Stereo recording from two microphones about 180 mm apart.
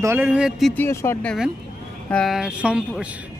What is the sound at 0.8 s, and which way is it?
Speech, 15° left (ahead or behind).